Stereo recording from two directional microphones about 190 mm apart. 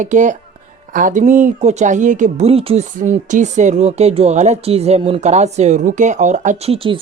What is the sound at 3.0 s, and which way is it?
Speech, 40° right (ahead or behind).